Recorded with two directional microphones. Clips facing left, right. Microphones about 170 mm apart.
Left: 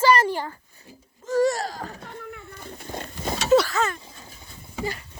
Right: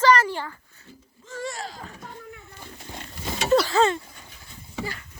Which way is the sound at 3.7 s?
25° right (ahead or behind).